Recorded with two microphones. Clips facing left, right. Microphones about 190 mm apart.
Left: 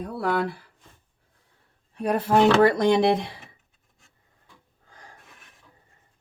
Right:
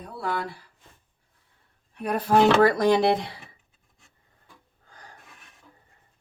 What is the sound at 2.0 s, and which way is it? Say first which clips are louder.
Speech: left 1 dB; 25° left (ahead or behind).